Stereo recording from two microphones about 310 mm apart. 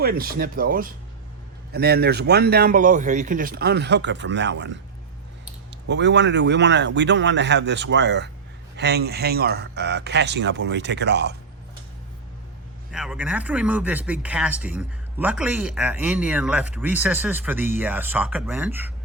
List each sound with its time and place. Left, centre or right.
0.0 s speech: right
12.9 s speech: centre